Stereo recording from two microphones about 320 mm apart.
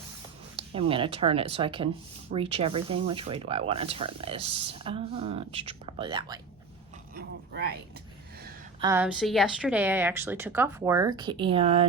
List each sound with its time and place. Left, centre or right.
0.5 s speech: centre
7.1 s a sound: right
8.8 s speech: centre